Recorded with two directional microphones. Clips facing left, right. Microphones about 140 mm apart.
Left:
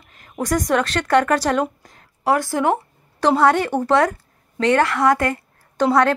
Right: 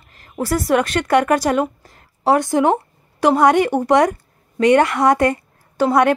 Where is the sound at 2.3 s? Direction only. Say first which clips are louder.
Right 3 dB; 20° right (ahead or behind).